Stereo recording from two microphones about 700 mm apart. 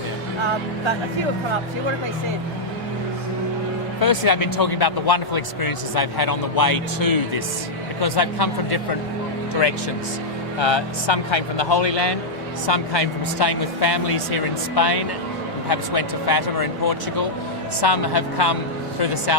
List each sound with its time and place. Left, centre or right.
4.0 s speech: left
10.6 s speech: left